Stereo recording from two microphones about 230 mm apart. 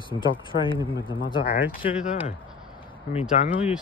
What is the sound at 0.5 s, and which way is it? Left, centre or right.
Speech, left.